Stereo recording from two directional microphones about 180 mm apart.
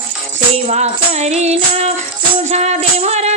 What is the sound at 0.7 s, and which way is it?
Female singing, 40° right (ahead or behind).